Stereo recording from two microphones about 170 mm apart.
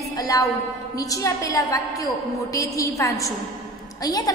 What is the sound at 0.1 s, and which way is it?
A woman's voice, 20° left (ahead or behind).